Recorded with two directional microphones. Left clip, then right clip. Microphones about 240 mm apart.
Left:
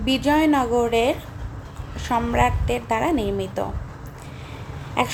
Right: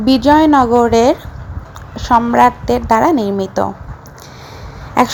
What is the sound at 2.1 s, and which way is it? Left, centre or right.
A woman's voice, right.